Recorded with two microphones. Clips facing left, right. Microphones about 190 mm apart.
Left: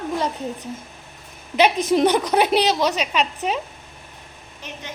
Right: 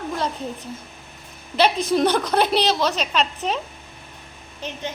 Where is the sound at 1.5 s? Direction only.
20° left (ahead or behind).